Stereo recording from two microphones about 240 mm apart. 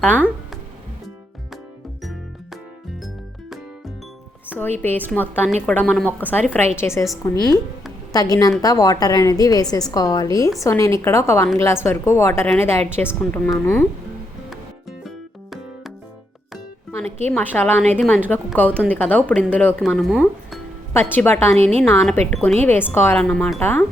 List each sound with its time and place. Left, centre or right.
0.0 s a sound: centre
4.8 s a woman's voice: centre
8.1 s a woman's voice: centre
14.5 s music: centre
17.3 s a woman's voice: centre
21.5 s a woman's voice: right
21.8 s a woman's voice: centre